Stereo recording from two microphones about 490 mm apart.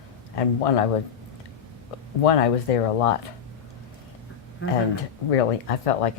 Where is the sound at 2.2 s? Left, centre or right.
Left.